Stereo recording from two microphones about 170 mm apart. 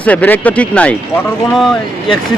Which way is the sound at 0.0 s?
10° left (ahead or behind).